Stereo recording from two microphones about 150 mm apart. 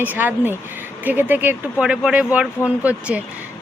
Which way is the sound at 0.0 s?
10° right (ahead or behind).